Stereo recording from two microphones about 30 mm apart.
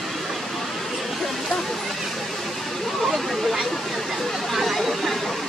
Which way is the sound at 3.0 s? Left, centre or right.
Centre.